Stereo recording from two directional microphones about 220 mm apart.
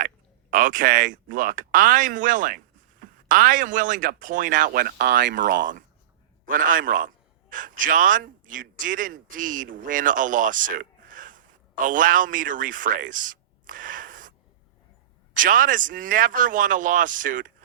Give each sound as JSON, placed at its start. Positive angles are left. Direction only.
{"t": 0.5, "sound": "speech", "side_deg": -40}
{"t": 6.4, "sound": "a man's voice", "side_deg": -40}